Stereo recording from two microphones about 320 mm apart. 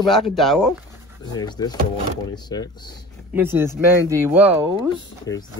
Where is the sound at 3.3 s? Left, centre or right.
Centre.